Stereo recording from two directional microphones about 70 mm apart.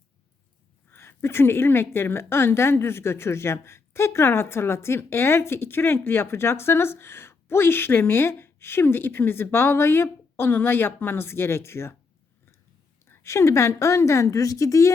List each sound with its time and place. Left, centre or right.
0.9 s a woman's voice: left
13.1 s a woman's voice: left